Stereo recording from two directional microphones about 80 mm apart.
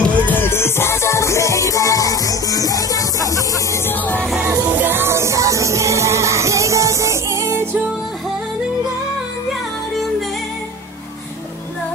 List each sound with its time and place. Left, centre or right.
0.1 s music: left
3.8 s music: left
4.7 s music: right